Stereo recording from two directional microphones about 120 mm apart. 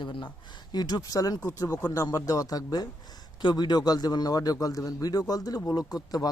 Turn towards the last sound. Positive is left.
turn(degrees=35)  # may be behind; listen again after turning